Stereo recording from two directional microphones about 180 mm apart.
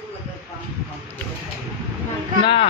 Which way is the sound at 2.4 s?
30° left (ahead or behind).